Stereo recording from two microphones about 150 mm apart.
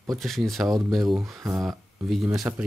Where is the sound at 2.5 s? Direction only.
15° right (ahead or behind).